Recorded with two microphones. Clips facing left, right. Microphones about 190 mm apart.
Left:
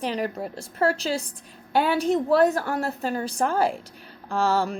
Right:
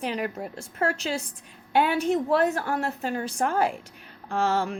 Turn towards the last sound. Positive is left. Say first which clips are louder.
# left 2 dB
turn(degrees=35)  # may be behind; listen again after turning